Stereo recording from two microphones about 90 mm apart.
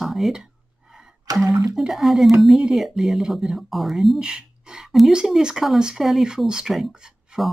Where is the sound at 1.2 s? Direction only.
40° right (ahead or behind).